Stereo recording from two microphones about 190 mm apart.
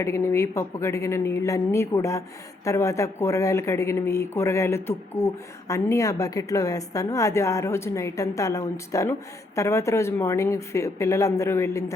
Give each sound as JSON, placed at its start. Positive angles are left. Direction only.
{"t": 0.0, "sound": "speech", "side_deg": 15}